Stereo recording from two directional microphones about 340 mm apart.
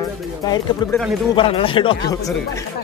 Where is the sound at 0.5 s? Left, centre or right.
Centre.